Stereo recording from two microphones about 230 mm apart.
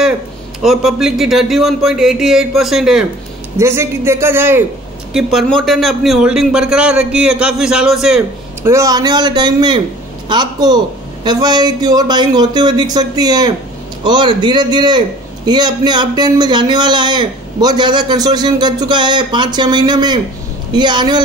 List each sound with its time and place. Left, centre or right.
0.6 s a man's voice: centre
5.1 s a man's voice: centre
8.6 s a man's voice: centre